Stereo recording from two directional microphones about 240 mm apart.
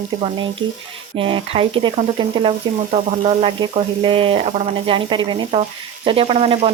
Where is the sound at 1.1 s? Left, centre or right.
Right.